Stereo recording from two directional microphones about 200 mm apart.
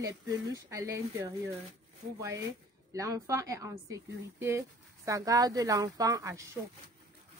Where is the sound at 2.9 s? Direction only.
15° right (ahead or behind).